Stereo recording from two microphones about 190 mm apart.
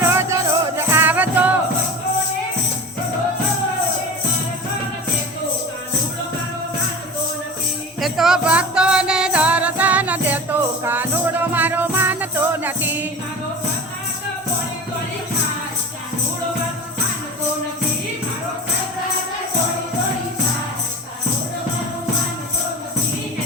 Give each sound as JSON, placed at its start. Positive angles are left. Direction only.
{"t": 0.1, "sound": "music", "side_deg": -15}
{"t": 8.0, "sound": "music", "side_deg": 0}